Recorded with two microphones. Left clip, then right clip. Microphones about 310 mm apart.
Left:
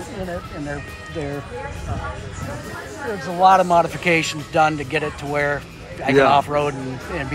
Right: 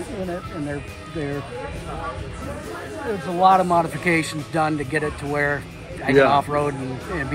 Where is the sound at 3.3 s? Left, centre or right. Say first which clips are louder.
Left 2 dB; centre.